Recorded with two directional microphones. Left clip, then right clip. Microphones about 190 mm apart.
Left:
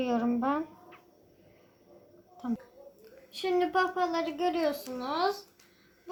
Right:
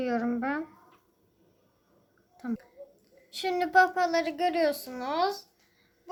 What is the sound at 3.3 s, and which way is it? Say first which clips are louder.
A woman's voice: right 4 dB; 25° right (ahead or behind).